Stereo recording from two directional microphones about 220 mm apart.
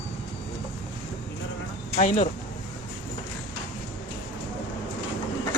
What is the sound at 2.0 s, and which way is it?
Speech, 30° left (ahead or behind).